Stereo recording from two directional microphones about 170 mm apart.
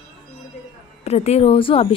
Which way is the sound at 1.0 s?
40° left (ahead or behind).